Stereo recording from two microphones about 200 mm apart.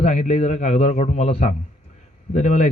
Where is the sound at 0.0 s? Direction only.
35° left (ahead or behind).